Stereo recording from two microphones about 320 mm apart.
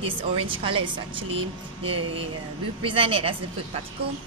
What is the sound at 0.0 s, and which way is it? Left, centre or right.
Speech, centre.